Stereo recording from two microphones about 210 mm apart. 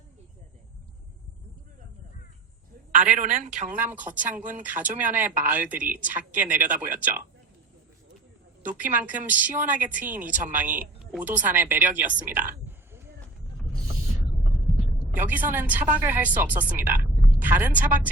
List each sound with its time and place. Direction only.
2.9 s a woman's voice: 35° right (ahead or behind)
3.8 s speech: 10° right (ahead or behind)
8.8 s speech: 10° right (ahead or behind)
10.2 s a woman's voice: 40° right (ahead or behind)
10.6 s a woman's voice: 10° right (ahead or behind)
14.7 s vehicle: 10° right (ahead or behind)
15.5 s speech: 10° right (ahead or behind)